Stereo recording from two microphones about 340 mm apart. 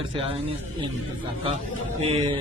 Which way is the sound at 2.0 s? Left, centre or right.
Centre.